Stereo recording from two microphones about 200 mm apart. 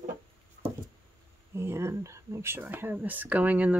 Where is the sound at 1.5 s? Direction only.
15° right (ahead or behind).